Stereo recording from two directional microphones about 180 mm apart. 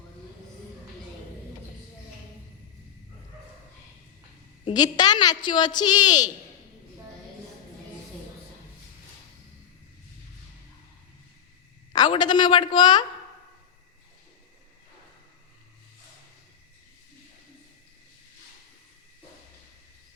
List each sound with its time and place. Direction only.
4.6 s a woman's voice: 25° left (ahead or behind)
11.9 s a woman's voice: 25° left (ahead or behind)